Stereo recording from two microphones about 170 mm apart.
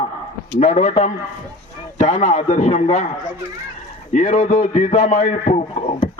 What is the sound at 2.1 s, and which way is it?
Speech, 35° left (ahead or behind).